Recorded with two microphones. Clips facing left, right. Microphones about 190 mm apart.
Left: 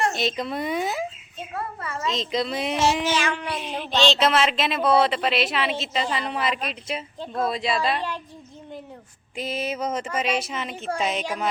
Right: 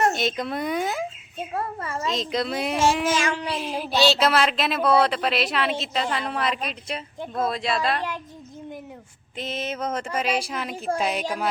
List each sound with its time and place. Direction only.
0.1 s speech: centre (ahead or behind)
1.5 s a child's voice: 40° right (ahead or behind)
2.0 s speech: centre (ahead or behind)
9.4 s a sound: 10° left (ahead or behind)
10.2 s speech: centre (ahead or behind)